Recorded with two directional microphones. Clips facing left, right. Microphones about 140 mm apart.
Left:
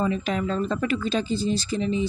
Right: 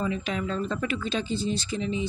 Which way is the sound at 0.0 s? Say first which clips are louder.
Left 4 dB; 40° left (ahead or behind).